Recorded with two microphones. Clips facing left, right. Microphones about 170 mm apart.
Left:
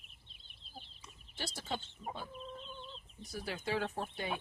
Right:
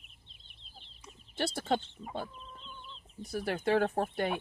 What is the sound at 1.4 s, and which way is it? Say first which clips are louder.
Speech: right 10 dB; 60° right (ahead or behind).